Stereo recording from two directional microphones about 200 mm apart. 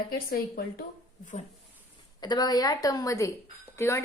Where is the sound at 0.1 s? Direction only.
50° left (ahead or behind).